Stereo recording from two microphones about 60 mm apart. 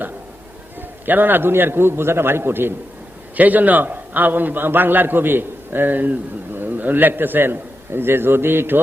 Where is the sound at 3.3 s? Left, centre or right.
Right.